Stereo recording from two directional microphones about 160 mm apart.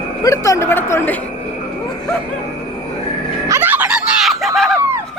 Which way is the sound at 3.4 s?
15° right (ahead or behind).